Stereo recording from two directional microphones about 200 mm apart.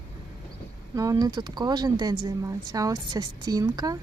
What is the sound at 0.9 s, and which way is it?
Speech, 15° right (ahead or behind).